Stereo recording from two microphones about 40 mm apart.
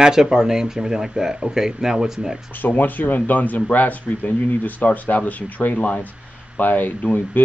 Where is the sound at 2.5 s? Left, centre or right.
Left.